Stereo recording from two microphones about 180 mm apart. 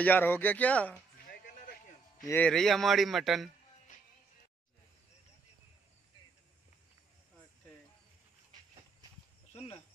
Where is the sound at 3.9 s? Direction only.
45° left (ahead or behind).